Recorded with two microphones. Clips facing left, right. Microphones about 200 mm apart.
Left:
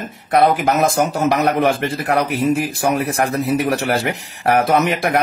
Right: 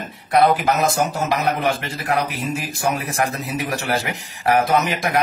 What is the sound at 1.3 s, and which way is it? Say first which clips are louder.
Speech: left 4 dB; 60° left (ahead or behind).